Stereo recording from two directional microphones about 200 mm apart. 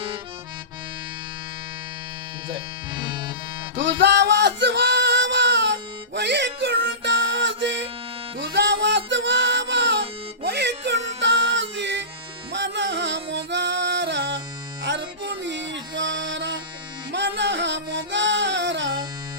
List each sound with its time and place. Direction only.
2.5 s speech: 25° right (ahead or behind)
3.8 s music: 60° right (ahead or behind)